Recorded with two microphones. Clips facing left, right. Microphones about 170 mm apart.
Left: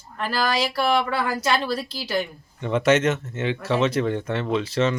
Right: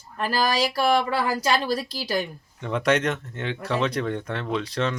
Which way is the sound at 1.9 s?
40° right (ahead or behind).